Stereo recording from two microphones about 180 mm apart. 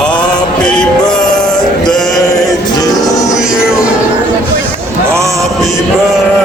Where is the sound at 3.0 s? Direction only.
20° left (ahead or behind).